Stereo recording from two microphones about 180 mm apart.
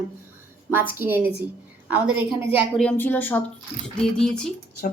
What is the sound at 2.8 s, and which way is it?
Speech, 10° left (ahead or behind).